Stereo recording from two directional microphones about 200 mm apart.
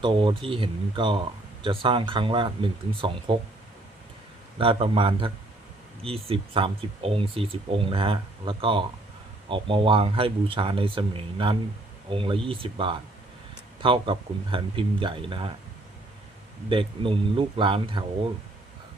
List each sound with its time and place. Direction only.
0.0 s speech: 25° right (ahead or behind)
4.5 s speech: 25° right (ahead or behind)
16.6 s speech: 25° right (ahead or behind)